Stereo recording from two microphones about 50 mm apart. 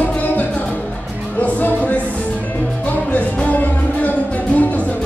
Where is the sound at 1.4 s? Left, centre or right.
Left.